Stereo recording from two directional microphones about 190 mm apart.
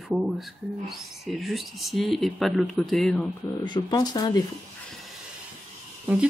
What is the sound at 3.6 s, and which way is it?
Speech, 20° left (ahead or behind).